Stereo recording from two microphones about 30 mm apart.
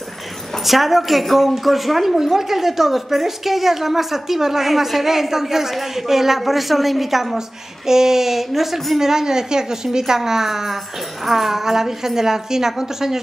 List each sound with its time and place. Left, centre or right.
0.7 s a woman's voice: centre
7.3 s a woman's voice: centre
9.0 s a woman's voice: centre